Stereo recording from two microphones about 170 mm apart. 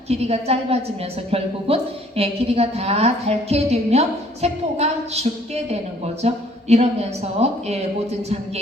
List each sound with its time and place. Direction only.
0.1 s a woman's voice: 40° right (ahead or behind)